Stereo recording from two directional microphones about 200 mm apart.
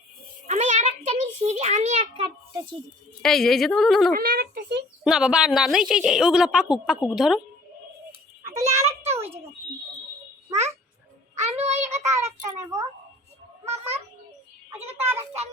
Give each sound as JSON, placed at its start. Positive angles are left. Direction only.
{"t": 0.4, "sound": "a sound", "side_deg": -35}
{"t": 3.2, "sound": "a woman's voice", "side_deg": 0}
{"t": 4.1, "sound": "speech", "side_deg": -50}
{"t": 5.0, "sound": "a woman's voice", "side_deg": -5}
{"t": 8.7, "sound": "a sound", "side_deg": -15}
{"t": 10.5, "sound": "babbling", "side_deg": -35}
{"t": 11.3, "sound": "child singing", "side_deg": -35}
{"t": 12.5, "sound": "a child's voice", "side_deg": -15}
{"t": 14.7, "sound": "a child's voice", "side_deg": -10}